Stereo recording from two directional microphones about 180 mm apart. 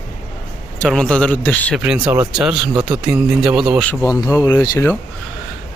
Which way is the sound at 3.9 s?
20° left (ahead or behind).